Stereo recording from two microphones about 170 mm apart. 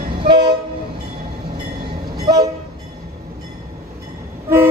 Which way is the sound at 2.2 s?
20° right (ahead or behind).